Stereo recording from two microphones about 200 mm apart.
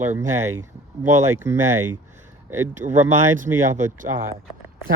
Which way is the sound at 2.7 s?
40° right (ahead or behind).